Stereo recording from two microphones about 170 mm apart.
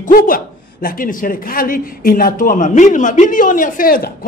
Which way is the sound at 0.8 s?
55° left (ahead or behind).